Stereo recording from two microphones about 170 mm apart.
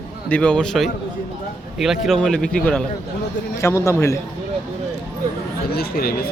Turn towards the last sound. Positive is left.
turn(degrees=65)  # may be behind; listen again after turning